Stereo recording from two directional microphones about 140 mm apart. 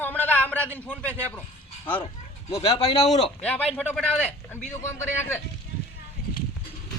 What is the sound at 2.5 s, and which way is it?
Speech, 45° left (ahead or behind).